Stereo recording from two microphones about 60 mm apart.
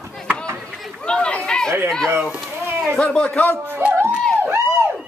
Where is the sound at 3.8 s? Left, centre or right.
Right.